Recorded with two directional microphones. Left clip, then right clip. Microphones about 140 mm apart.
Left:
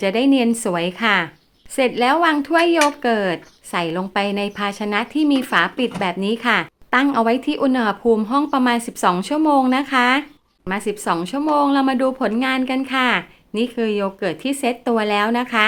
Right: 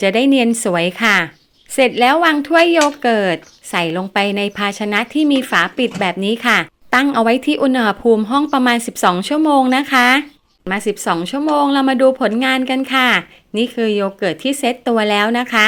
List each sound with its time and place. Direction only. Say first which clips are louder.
0.0 s a woman's voice: right 4 dB; 25° right (ahead or behind)